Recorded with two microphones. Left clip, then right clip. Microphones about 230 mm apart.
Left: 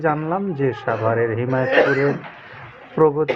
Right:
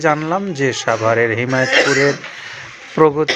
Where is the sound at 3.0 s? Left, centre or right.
Centre.